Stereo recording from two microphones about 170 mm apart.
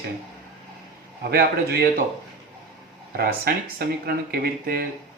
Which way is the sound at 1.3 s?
65° right (ahead or behind).